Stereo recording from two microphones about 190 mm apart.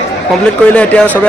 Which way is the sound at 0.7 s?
10° left (ahead or behind).